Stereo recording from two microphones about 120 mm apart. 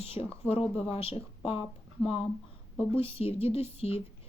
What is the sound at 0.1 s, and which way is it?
A woman's voice, 55° left (ahead or behind).